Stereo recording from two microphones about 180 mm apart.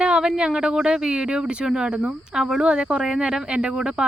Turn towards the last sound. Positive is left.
turn(degrees=-5)  # may be behind; listen again after turning